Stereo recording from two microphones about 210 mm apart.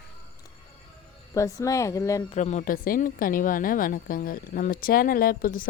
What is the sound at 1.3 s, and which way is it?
Speech, 15° left (ahead or behind).